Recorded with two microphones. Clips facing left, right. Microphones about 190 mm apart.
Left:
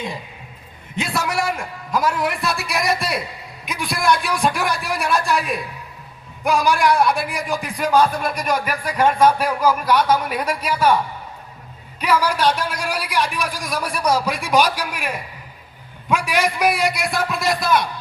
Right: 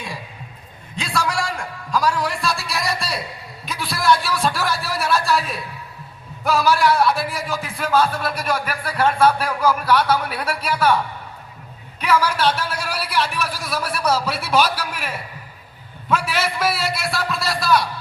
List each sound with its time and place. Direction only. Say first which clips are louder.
0.9 s a man's voice: left 1 dB; 20° left (ahead or behind)
11.9 s a man's voice: even; 10° left (ahead or behind)